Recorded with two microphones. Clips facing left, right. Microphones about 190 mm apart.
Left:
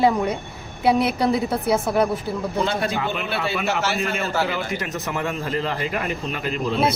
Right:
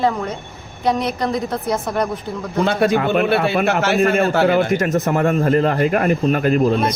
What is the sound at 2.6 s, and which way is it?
A man's voice, 55° right (ahead or behind).